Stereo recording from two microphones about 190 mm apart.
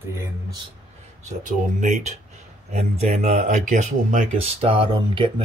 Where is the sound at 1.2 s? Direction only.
40° right (ahead or behind).